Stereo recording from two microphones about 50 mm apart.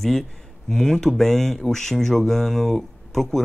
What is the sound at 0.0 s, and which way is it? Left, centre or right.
Speech, centre.